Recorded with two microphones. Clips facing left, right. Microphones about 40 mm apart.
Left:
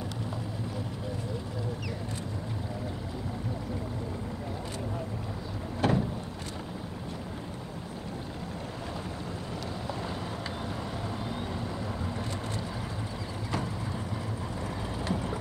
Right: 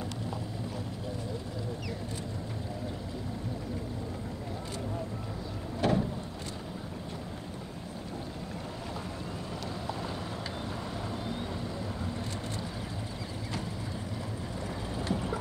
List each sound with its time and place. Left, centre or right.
5.8 s boat: left
15.0 s boat: left